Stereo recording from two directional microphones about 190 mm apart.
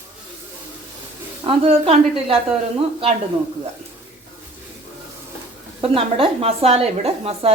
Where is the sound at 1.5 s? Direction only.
30° right (ahead or behind).